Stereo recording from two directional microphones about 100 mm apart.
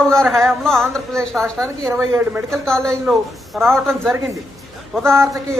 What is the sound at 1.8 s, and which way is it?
Speech, 25° right (ahead or behind).